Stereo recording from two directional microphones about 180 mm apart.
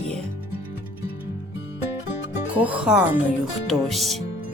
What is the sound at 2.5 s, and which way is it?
A woman's voice, 10° right (ahead or behind).